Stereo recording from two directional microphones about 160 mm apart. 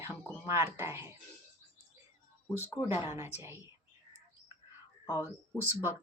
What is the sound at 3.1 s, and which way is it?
Speech, 15° right (ahead or behind).